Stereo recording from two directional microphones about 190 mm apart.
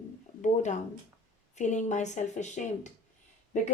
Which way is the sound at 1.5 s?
40° left (ahead or behind).